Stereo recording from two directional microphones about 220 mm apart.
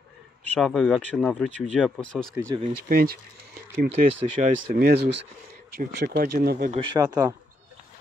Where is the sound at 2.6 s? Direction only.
40° right (ahead or behind).